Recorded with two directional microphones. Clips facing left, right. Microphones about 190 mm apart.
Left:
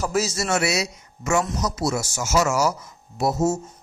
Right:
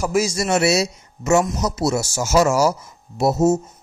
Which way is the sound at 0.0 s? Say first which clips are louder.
Right 4 dB; 10° right (ahead or behind).